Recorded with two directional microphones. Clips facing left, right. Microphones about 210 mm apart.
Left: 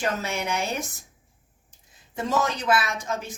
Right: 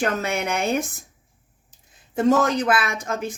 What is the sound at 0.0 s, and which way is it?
Speech, 55° right (ahead or behind).